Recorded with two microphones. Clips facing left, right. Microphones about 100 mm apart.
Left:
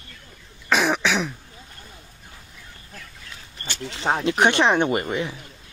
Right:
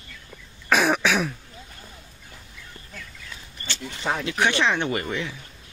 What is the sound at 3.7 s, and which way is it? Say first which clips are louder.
Single-lens reflex camera: left 2 dB; 80° left.